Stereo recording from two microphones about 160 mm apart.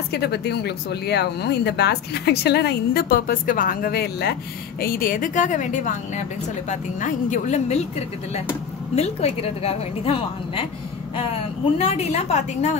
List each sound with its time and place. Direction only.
0.1 s a woman's voice: 90° left; by 7.8 s 45° left (ahead or behind)
8.9 s a woman's voice: 40° left (ahead or behind)
11.8 s a woman's voice: 40° left (ahead or behind)